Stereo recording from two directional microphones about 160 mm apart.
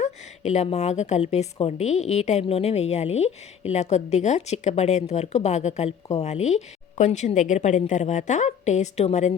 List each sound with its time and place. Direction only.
0.0 s a woman's voice: 45° left (ahead or behind)